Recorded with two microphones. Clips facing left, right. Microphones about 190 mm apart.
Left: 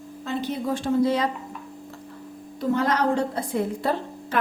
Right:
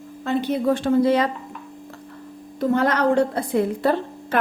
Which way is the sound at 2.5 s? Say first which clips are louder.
Right 3 dB; 60° right (ahead or behind).